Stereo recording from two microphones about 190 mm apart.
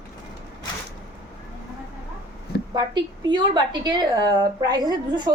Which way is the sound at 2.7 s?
20° right (ahead or behind).